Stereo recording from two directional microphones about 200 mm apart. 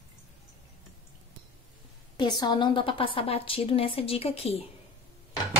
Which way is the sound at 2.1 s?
20° left (ahead or behind).